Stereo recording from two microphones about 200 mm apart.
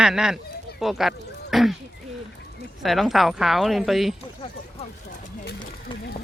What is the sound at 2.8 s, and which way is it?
Speech, centre (ahead or behind).